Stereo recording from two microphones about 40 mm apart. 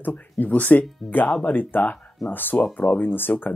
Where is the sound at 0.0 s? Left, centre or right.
Left.